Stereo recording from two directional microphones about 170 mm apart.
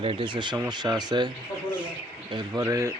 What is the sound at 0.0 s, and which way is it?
A man's voice, 30° right (ahead or behind).